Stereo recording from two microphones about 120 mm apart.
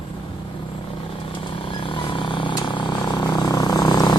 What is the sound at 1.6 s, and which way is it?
Vehicle, 45° left (ahead or behind).